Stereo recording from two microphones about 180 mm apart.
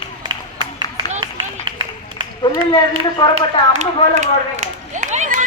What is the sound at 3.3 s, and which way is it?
Run, 40° right (ahead or behind).